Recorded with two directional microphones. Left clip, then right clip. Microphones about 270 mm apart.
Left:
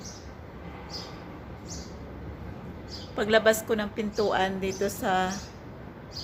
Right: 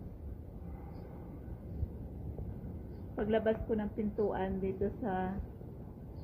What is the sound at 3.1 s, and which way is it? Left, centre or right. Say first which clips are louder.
A woman's voice: left 10 dB; centre.